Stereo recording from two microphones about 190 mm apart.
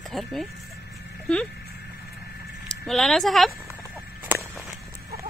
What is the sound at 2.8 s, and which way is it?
Speech, centre (ahead or behind).